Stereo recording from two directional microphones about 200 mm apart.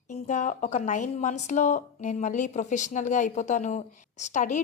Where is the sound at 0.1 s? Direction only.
35° left (ahead or behind).